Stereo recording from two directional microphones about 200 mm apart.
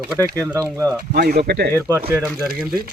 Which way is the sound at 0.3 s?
5° left (ahead or behind).